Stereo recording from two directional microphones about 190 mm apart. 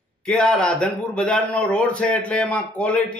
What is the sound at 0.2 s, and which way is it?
A man's voice, 5° left (ahead or behind).